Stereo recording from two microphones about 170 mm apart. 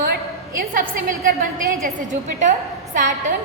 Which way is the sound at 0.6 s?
55° right (ahead or behind).